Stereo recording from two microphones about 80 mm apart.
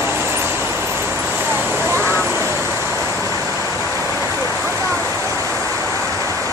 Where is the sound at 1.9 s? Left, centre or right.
Right.